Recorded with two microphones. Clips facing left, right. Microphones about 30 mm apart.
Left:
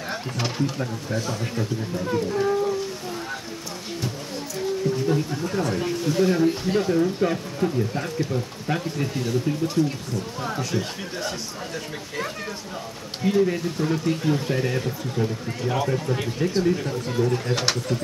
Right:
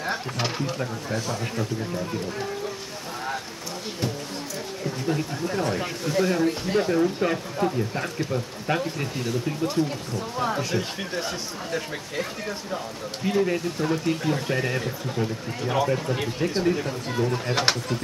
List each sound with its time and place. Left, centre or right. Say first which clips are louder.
0.1 s speech: left 1 dB; centre
5.0 s speech: left 3 dB; centre
13.2 s speech: left 2 dB; centre